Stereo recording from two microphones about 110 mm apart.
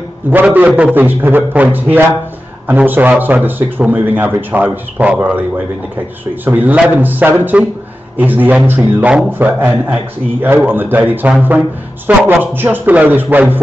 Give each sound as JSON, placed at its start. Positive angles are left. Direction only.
{"t": 0.3, "sound": "a man's voice", "side_deg": -15}
{"t": 6.4, "sound": "a man's voice", "side_deg": -15}